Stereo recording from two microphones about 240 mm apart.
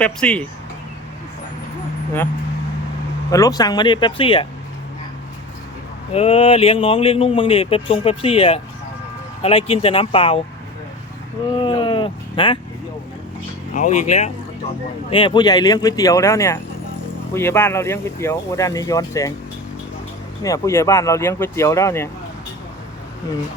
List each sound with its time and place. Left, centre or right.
0.0 s speech: centre
3.3 s speech: centre
6.1 s speech: left
11.6 s a sound: centre
13.7 s speech: left
15.1 s speech: centre
20.4 s speech: centre